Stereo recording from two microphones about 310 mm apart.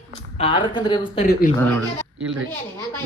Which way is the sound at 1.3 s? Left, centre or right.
Left.